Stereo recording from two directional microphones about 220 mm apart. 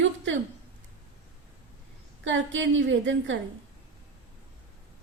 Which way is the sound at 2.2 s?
60° right (ahead or behind).